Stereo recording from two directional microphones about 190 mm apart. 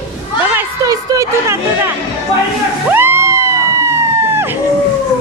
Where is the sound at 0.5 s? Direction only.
15° right (ahead or behind).